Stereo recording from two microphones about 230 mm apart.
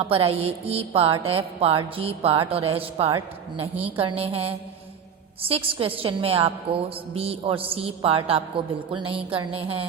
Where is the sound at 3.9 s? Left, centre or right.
Right.